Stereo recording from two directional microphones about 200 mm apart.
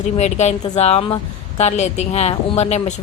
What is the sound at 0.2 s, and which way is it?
Speech, 35° left (ahead or behind).